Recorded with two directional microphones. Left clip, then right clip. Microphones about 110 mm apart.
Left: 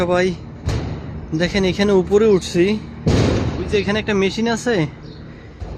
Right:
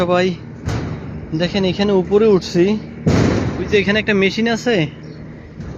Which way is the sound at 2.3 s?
25° left (ahead or behind).